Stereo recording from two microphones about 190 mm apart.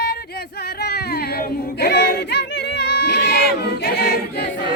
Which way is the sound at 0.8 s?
60° left (ahead or behind).